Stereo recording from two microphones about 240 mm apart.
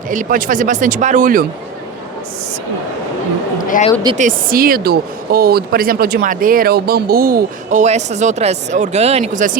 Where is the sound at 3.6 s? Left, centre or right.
Left.